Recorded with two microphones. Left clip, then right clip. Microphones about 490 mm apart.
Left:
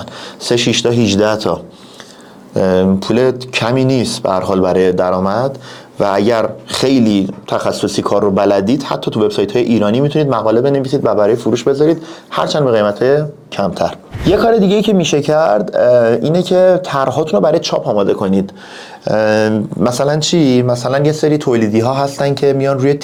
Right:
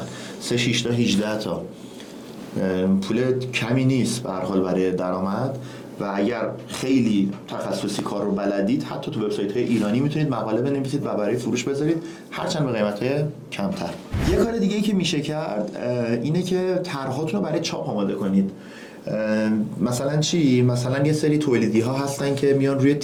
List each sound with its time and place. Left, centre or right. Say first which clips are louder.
0.4 s speech: left 10 dB; left
2.6 s speech: left 11 dB; left
6.0 s speech: left 12 dB; left
19.0 s speech: left 12 dB; left